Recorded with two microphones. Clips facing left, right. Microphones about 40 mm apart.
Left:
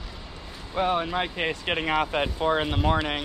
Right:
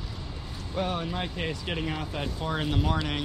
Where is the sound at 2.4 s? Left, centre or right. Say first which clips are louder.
Left 4 dB; left.